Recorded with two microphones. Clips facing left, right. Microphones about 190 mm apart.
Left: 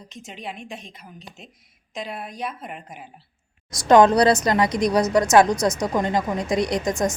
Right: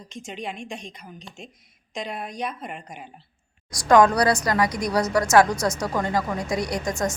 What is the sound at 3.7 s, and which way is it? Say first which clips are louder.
A woman's voice: left 2 dB; 25° left (ahead or behind).